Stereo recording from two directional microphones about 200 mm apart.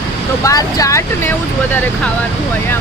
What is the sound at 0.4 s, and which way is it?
Speech, 15° left (ahead or behind).